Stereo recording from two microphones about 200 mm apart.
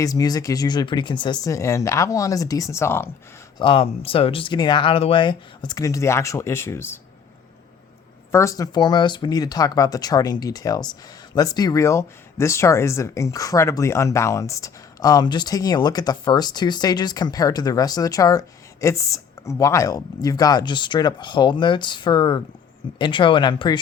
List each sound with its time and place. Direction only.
0.0 s speech: 20° left (ahead or behind)
3.6 s speech: 25° left (ahead or behind); by 7.0 s 10° left (ahead or behind)
8.3 s speech: 15° left (ahead or behind)